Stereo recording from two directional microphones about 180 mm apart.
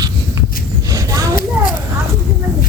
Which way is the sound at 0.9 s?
20° right (ahead or behind).